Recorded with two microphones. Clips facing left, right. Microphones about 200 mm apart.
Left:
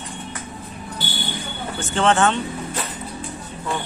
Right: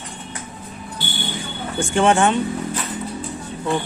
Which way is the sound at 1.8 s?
15° right (ahead or behind).